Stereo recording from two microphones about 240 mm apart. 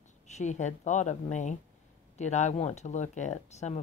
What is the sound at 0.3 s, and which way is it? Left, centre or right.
Speech, left.